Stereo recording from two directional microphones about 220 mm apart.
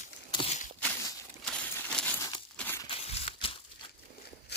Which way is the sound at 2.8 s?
25° left (ahead or behind).